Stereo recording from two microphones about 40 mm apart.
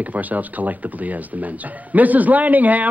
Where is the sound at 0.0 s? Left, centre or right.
Right.